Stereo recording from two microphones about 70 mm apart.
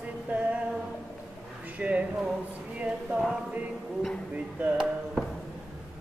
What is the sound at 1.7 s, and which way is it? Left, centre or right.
Speech, right.